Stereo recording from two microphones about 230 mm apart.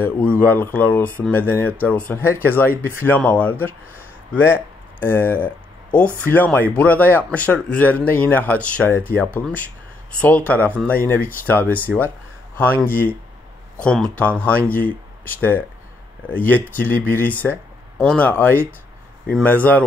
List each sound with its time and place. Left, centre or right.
0.0 s speech: centre
5.0 s speech: centre